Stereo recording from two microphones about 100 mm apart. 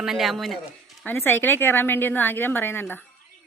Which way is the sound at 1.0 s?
20° left (ahead or behind).